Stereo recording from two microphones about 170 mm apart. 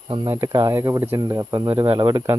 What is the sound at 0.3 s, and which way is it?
Speech, 20° right (ahead or behind).